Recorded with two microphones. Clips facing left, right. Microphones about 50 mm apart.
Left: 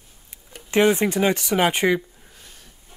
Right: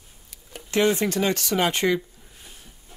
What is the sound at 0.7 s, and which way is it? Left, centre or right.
Speech, left.